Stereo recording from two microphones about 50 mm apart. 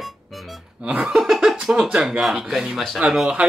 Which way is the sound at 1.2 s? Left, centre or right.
Centre.